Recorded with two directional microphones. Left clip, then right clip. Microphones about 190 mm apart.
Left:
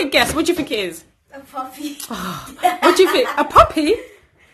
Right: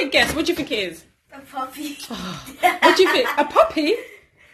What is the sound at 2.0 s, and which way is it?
A woman's voice, 15° left (ahead or behind).